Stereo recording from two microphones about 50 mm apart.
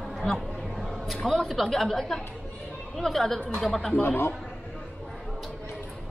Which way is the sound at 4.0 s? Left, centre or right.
Left.